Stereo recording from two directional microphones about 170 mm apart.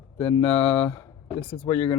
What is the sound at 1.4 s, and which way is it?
Speech, 30° left (ahead or behind).